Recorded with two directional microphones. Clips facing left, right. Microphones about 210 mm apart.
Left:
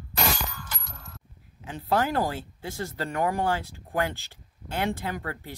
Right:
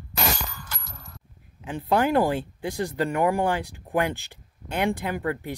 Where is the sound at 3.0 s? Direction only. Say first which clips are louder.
Right 4 dB; 15° right (ahead or behind).